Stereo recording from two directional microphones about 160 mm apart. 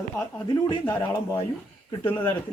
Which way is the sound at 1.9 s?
30° left (ahead or behind).